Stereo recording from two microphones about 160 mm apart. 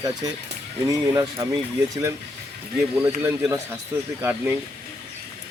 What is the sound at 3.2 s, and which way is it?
Speech, 20° right (ahead or behind).